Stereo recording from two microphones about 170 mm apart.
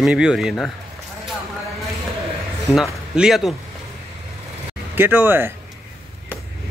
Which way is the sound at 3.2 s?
Centre (ahead or behind).